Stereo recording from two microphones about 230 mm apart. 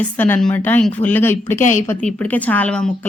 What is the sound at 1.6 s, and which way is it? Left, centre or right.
Speech, left.